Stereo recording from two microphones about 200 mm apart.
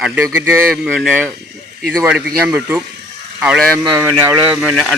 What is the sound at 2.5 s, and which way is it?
A man's voice, 10° right (ahead or behind).